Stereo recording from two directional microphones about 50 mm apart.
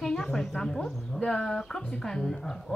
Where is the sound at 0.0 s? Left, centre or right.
Centre.